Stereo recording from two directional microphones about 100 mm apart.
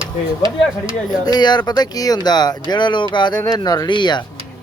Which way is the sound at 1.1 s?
45° left (ahead or behind).